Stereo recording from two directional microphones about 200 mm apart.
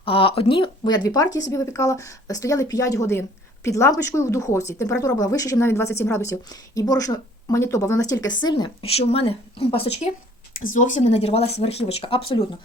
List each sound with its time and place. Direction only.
0.0 s speech: 25° left (ahead or behind)